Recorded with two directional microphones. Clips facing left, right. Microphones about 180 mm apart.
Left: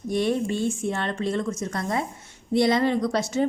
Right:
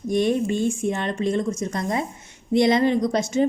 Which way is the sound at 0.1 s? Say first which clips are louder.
Right 3 dB; 20° right (ahead or behind).